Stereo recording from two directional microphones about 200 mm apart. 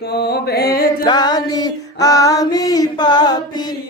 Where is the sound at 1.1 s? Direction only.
20° left (ahead or behind).